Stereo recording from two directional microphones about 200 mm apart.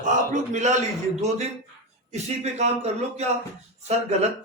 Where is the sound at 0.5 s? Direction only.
35° right (ahead or behind).